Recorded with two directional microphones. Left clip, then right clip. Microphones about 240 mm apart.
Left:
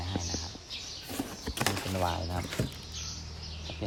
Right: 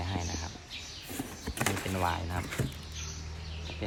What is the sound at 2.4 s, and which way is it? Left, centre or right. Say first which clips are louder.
Speech: left 1 dB; centre.